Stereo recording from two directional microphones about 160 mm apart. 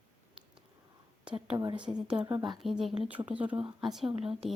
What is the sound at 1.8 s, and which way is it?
Speech, 5° right (ahead or behind).